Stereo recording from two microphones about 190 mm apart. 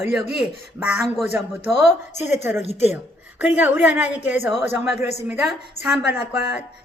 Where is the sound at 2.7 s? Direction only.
35° left (ahead or behind).